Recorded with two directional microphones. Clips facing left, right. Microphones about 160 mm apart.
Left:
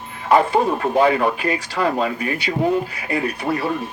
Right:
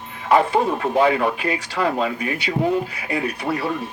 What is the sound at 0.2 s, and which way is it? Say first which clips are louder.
Speech: left 1 dB; 40° left (ahead or behind).